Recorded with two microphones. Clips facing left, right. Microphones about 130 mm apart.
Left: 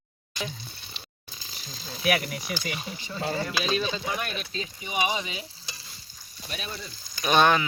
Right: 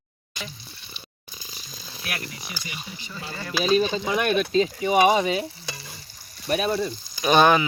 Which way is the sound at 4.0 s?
70° right (ahead or behind).